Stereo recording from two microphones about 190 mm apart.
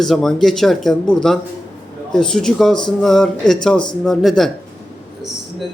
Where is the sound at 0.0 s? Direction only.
Centre (ahead or behind).